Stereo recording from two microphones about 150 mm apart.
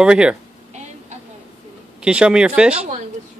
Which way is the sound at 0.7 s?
50° right (ahead or behind).